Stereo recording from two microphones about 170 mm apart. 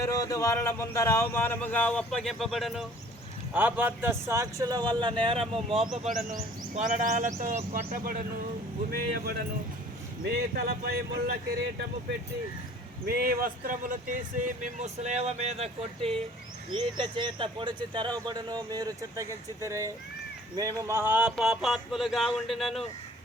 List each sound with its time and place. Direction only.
0.0 s speech: 20° left (ahead or behind); by 5.8 s 35° right (ahead or behind)
6.3 s speech: 45° right (ahead or behind)
8.9 s speech: 65° right (ahead or behind)
13.1 s speech: 60° right (ahead or behind); by 22.8 s centre (ahead or behind)